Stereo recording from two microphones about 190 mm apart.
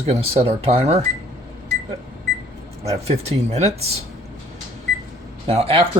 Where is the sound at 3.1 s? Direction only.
35° right (ahead or behind).